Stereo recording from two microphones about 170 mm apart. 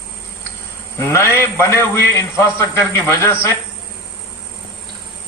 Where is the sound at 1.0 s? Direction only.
15° left (ahead or behind).